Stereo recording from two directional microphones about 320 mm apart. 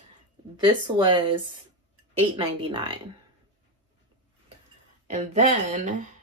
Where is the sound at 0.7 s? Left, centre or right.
Centre.